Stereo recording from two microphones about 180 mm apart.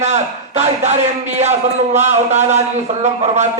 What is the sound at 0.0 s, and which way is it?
A man's voice, 40° right (ahead or behind).